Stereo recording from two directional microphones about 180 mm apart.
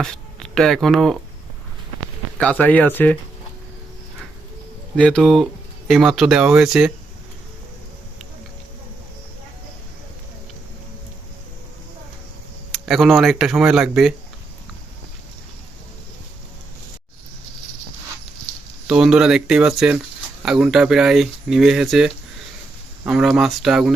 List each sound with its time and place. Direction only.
0.0 s speech: 5° left (ahead or behind)
2.4 s speech: 10° left (ahead or behind)
4.9 s speech: 5° left (ahead or behind)
12.8 s speech: centre (ahead or behind)
18.9 s speech: 5° right (ahead or behind)